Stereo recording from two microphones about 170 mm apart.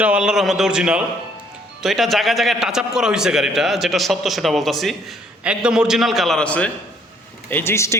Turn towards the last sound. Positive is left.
turn(degrees=15)  # may be behind; listen again after turning